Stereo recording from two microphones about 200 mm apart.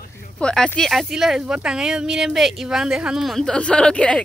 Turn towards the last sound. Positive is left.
turn(degrees=5)  # may be behind; listen again after turning